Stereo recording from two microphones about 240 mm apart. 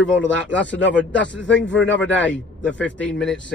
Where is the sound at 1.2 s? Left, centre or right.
Centre.